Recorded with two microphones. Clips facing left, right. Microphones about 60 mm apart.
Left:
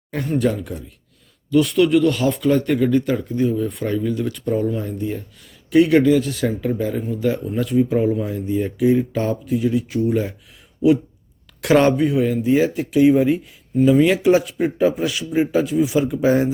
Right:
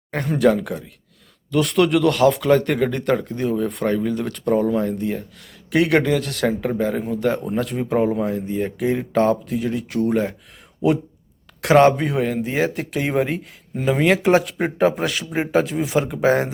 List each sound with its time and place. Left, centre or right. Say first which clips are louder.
0.3 s speech: right 4 dB; right
1.5 s speech: left 2 dB; right
6.7 s a man's voice: even; right
7.0 s speech: right 1 dB; right
7.3 s a man's voice: left 1 dB; right
11.6 s speech: right 2 dB; right
11.9 s a man's voice: left 3 dB; right
15.8 s a man's voice: left 2 dB; right